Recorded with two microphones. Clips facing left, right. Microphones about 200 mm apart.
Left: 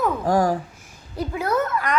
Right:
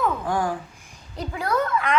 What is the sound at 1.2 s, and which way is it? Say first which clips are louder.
Speech: left 2 dB; 5° left (ahead or behind).